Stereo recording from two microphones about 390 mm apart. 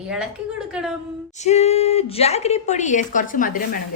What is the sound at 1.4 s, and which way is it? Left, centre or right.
A woman's voice, centre.